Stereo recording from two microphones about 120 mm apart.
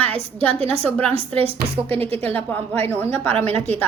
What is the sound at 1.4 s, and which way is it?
Speech, 50° right (ahead or behind).